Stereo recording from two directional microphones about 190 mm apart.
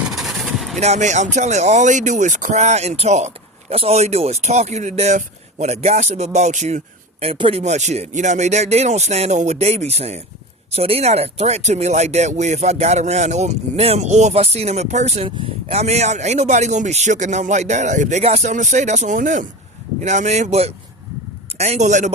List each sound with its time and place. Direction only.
0.1 s vehicle: centre (ahead or behind)
0.8 s speech: 35° right (ahead or behind)